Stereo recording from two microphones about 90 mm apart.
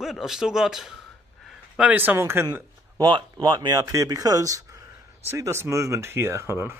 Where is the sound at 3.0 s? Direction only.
55° right (ahead or behind).